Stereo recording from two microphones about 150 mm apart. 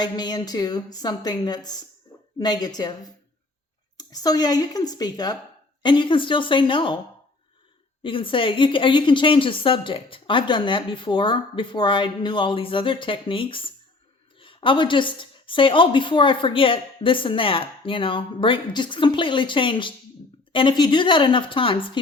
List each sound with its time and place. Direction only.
0.0 s speech: 30° left (ahead or behind)
3.9 s speech: 25° left (ahead or behind)
8.0 s speech: 35° left (ahead or behind)